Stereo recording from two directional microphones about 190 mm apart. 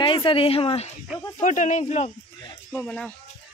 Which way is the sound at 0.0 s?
25° left (ahead or behind).